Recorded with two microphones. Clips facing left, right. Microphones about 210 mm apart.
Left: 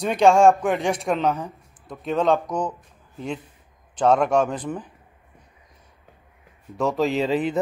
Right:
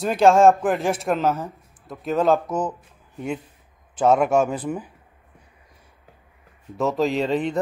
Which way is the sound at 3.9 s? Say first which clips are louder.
Right 1 dB; 5° right (ahead or behind).